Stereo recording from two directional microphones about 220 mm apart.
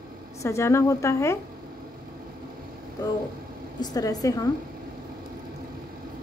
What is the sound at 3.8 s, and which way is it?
Speech, 15° left (ahead or behind).